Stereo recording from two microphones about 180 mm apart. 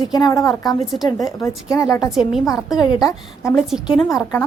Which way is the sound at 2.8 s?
20° left (ahead or behind).